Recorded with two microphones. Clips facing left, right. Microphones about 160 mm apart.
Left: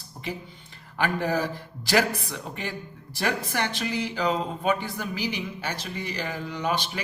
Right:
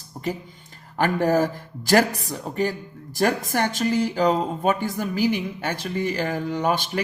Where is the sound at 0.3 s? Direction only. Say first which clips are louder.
Right 6 dB; 45° right (ahead or behind).